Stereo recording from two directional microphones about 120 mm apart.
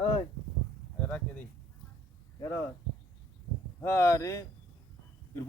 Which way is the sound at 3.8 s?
20° left (ahead or behind).